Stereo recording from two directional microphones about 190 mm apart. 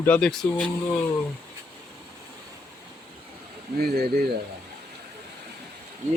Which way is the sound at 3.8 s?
50° right (ahead or behind).